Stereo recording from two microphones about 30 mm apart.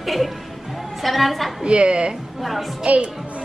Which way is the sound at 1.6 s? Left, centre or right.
Right.